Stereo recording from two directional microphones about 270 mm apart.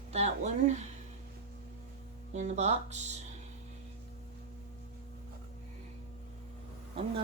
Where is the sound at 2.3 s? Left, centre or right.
Right.